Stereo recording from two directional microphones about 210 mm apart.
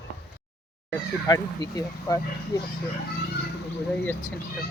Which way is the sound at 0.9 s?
20° left (ahead or behind).